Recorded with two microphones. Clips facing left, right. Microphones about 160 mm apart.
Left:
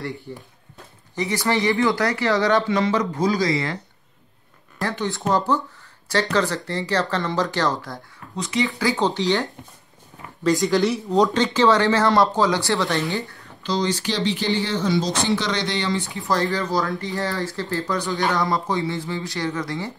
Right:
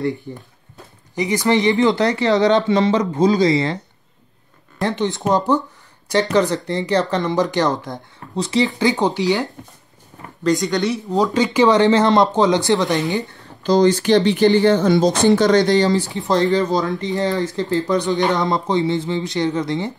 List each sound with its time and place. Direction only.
0.3 s speech: 20° right (ahead or behind)
4.8 s speech: 20° right (ahead or behind)
6.3 s speech: 20° right (ahead or behind)
8.4 s speech: 35° right (ahead or behind)
8.8 s speech: 15° right (ahead or behind)
10.4 s speech: centre (ahead or behind)
11.5 s speech: 15° right (ahead or behind)
13.6 s speech: 45° right (ahead or behind)
16.2 s speech: 20° right (ahead or behind)